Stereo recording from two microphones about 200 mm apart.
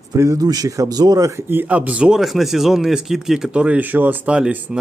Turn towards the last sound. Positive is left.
turn(degrees=-5)  # may be behind; listen again after turning